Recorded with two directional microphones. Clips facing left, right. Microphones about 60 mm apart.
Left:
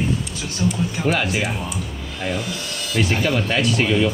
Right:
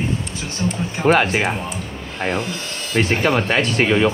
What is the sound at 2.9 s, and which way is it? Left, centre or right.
Speech, right.